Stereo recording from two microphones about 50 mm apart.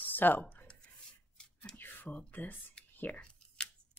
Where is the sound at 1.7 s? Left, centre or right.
Left.